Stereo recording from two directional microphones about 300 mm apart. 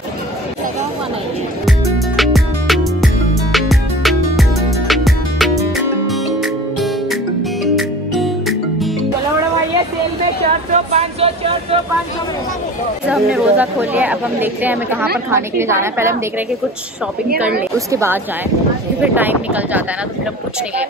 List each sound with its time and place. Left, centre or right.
1.7 s music: centre
10.7 s a sound: right
13.1 s a woman's voice: centre
17.7 s a woman's voice: centre